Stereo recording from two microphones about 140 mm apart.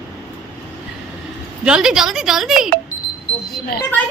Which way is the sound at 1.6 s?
5° right (ahead or behind).